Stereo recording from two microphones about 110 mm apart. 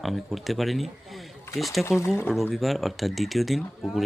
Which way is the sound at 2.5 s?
Centre (ahead or behind).